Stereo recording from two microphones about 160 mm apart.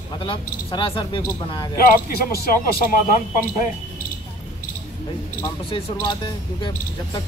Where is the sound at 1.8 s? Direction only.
70° left (ahead or behind).